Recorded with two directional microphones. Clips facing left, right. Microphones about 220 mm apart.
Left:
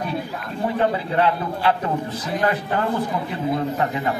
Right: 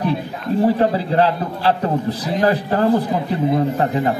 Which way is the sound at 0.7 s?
35° right (ahead or behind).